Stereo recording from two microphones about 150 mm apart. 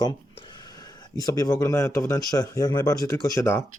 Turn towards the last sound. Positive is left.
turn(degrees=15)  # may be behind; listen again after turning